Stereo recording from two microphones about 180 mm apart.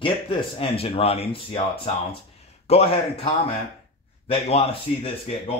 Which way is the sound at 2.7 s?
30° left (ahead or behind).